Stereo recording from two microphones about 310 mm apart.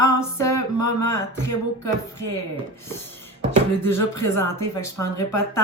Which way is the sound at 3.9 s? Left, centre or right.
Centre.